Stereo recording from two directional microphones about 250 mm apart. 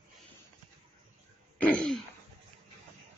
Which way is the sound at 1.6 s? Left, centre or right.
Centre.